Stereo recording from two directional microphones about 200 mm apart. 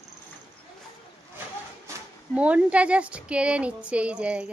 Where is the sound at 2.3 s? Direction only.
5° right (ahead or behind).